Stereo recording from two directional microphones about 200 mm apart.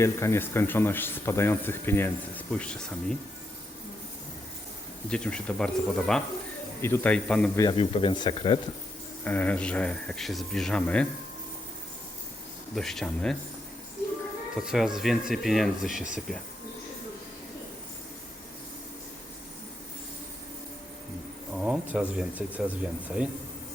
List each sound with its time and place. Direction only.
0.0 s speech: 15° left (ahead or behind)
5.0 s speech: 5° left (ahead or behind)
7.6 s speech: 25° left (ahead or behind)
9.2 s speech: 10° left (ahead or behind)
12.7 s speech: centre (ahead or behind)
14.6 s speech: centre (ahead or behind)
21.5 s speech: 5° right (ahead or behind)